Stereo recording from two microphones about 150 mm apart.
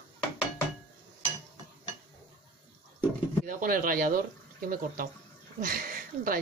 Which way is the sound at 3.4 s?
70° right (ahead or behind).